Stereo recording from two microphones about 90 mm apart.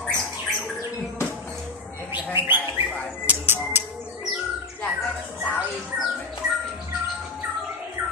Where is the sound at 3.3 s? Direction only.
25° right (ahead or behind).